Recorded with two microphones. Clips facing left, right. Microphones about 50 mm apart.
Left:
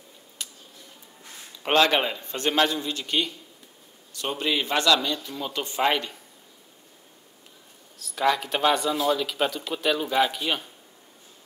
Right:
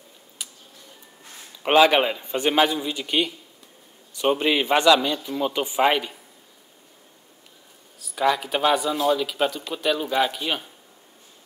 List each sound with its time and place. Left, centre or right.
0.4 s tick-tock: centre
1.6 s a man's voice: centre
8.0 s speech: centre